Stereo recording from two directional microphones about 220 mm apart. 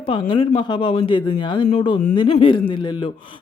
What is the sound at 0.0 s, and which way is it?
Speech, 25° left (ahead or behind).